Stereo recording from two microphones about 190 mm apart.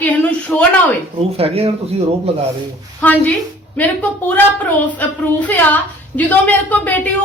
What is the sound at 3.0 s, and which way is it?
Speech, 10° left (ahead or behind).